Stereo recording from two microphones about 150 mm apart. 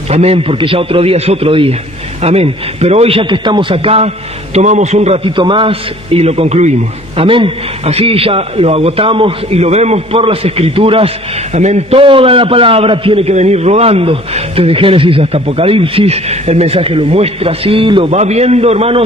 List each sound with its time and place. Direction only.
0.1 s a man's voice: 45° right (ahead or behind)
7.2 s a man's voice: 35° right (ahead or behind)
18.1 s a man's voice: 45° right (ahead or behind)